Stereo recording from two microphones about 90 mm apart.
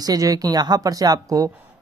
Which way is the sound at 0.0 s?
45° right (ahead or behind).